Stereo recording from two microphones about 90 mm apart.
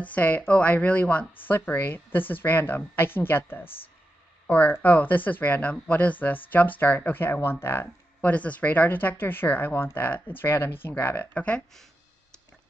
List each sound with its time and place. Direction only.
0.0 s speech: 15° left (ahead or behind)